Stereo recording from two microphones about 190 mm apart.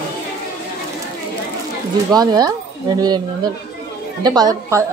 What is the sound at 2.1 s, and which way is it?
Speech, 20° right (ahead or behind).